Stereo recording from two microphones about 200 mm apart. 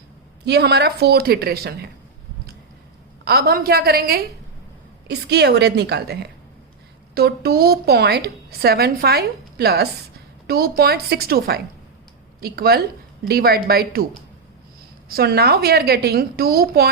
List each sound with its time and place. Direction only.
0.4 s a woman's voice: 55° right (ahead or behind)
3.2 s a woman's voice: 50° right (ahead or behind)
15.1 s a woman's voice: 50° right (ahead or behind)